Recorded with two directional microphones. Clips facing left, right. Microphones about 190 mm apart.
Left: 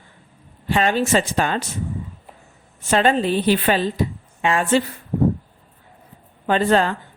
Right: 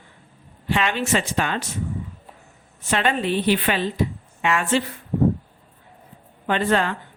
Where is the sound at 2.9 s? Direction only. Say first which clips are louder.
Left 4 dB; 35° left (ahead or behind).